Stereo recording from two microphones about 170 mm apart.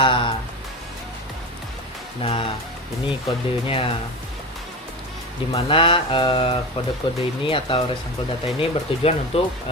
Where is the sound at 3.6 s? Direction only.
35° left (ahead or behind).